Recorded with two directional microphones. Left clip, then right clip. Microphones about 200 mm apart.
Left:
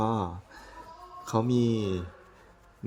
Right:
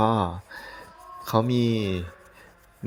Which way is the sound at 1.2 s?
20° right (ahead or behind).